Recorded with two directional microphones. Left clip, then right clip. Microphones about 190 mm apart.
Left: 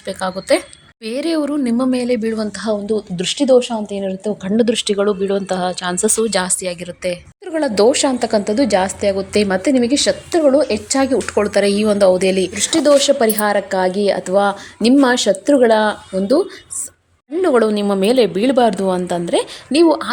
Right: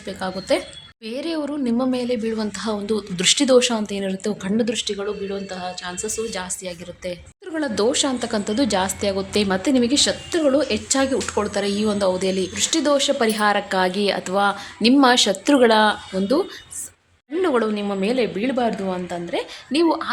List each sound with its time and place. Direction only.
0.0 s a woman's voice: 30° left (ahead or behind); by 4.5 s 5° left (ahead or behind)
4.5 s a woman's voice: 30° left (ahead or behind)
6.6 s a woman's voice: 20° left (ahead or behind)